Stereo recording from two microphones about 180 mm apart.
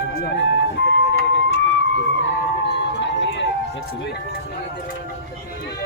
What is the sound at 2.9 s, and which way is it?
Music, 80° left.